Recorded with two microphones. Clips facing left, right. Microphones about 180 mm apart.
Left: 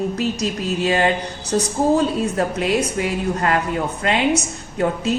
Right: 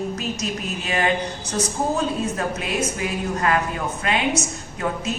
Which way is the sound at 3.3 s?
35° left (ahead or behind).